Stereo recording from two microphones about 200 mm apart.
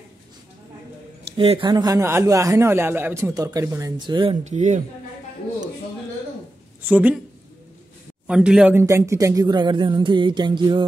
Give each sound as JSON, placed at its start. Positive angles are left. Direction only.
{"t": 1.3, "sound": "speech", "side_deg": -25}
{"t": 6.8, "sound": "a woman's voice", "side_deg": -10}
{"t": 8.3, "sound": "speech", "side_deg": -5}